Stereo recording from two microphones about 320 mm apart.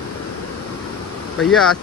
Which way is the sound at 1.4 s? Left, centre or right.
Centre.